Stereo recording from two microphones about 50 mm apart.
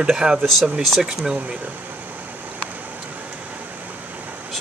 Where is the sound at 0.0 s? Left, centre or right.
Centre.